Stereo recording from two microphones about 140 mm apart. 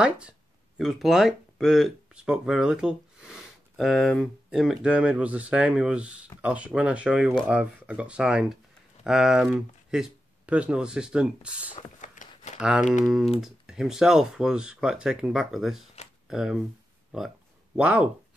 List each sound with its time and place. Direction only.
0.7 s speech: centre (ahead or behind)
12.0 s a sound: 60° left (ahead or behind)
12.5 s speech: 5° right (ahead or behind)
17.7 s speech: 10° right (ahead or behind)